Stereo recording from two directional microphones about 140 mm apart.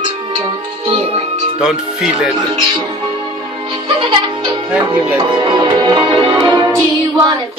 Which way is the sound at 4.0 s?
35° right (ahead or behind).